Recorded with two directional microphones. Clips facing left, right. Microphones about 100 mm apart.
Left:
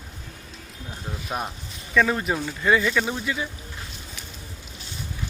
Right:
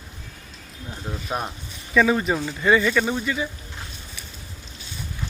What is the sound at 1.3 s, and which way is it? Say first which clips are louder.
Speech: right 1 dB; 5° right (ahead or behind).